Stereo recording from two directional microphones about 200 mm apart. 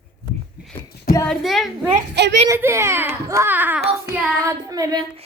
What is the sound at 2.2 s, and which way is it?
Speech, 60° right (ahead or behind).